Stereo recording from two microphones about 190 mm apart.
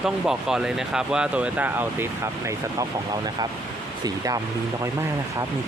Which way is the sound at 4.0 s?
20° right (ahead or behind).